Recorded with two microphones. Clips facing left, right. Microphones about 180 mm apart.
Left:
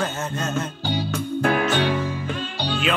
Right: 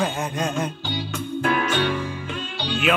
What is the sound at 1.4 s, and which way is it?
Music, 45° left (ahead or behind).